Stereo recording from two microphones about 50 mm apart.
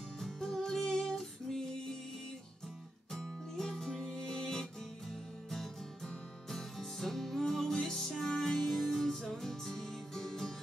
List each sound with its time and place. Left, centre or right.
0.2 s music: centre
3.1 s music: centre
6.5 s music: centre